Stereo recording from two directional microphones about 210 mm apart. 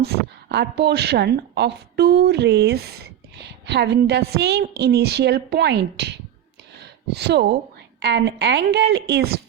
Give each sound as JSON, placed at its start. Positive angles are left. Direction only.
{"t": 0.0, "sound": "a woman's voice", "side_deg": -50}